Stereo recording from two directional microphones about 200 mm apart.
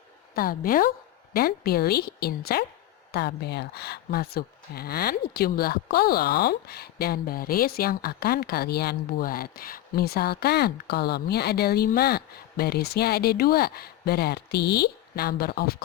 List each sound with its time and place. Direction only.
0.3 s speech: 45° left (ahead or behind)